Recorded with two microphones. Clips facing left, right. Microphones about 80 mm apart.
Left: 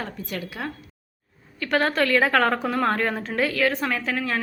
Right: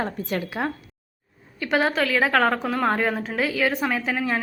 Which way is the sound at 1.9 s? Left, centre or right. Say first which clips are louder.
Left 1 dB; centre.